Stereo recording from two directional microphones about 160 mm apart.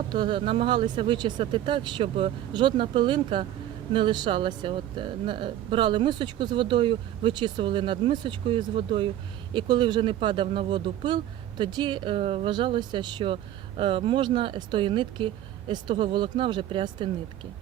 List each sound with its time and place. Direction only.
0.1 s speech: 30° right (ahead or behind)